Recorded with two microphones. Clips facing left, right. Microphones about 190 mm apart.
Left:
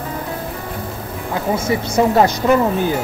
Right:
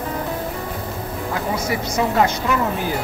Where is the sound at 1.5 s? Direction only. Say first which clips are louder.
Left 7 dB; 25° left (ahead or behind).